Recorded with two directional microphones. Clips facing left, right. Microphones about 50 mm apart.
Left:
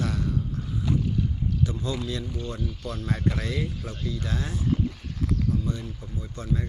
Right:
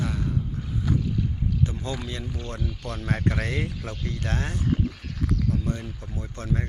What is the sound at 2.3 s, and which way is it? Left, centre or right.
Speech, right.